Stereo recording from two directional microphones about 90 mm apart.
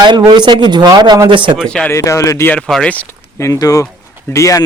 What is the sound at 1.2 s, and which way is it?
Speech, 65° right (ahead or behind).